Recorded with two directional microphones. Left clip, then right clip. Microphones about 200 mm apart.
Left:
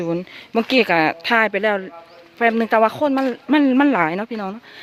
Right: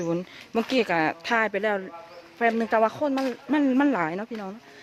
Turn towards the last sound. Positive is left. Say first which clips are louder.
# left 8 dB
turn(degrees=35)  # may be behind; listen again after turning